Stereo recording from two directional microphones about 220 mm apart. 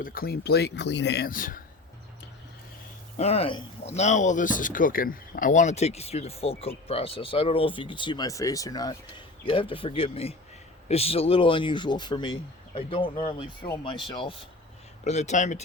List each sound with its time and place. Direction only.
0.0 s speech: 40° left (ahead or behind)
3.2 s speech: 30° left (ahead or behind)